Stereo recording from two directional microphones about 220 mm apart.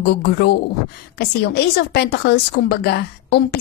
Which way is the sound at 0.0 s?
45° left (ahead or behind).